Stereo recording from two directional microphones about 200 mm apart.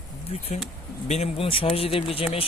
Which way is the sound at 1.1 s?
30° left (ahead or behind).